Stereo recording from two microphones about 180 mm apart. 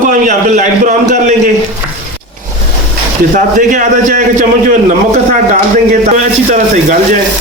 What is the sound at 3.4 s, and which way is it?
A man's voice, 45° right (ahead or behind).